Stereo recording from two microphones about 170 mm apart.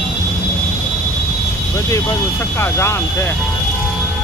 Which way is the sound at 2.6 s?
15° left (ahead or behind).